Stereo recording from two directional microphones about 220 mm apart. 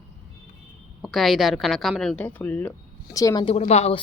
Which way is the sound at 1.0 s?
Centre (ahead or behind).